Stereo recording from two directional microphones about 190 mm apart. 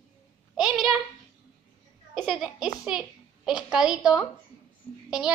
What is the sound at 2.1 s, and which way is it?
A child's voice, centre (ahead or behind).